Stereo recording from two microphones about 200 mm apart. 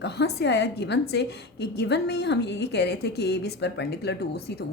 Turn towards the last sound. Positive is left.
turn(degrees=55)  # may be behind; listen again after turning